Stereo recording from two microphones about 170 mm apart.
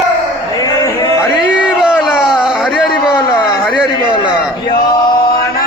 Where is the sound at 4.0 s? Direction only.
30° left (ahead or behind).